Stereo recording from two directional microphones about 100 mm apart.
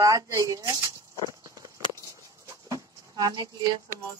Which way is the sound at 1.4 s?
35° right (ahead or behind).